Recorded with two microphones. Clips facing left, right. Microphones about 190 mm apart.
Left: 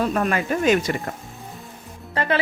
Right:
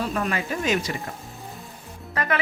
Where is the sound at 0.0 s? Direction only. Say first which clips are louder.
Left 5 dB; 50° left (ahead or behind).